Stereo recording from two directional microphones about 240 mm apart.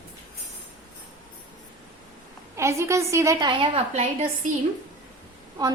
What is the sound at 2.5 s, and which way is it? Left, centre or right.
A woman's voice, centre.